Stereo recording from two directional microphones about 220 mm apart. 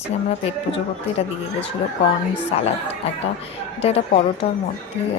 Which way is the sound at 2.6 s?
30° left (ahead or behind).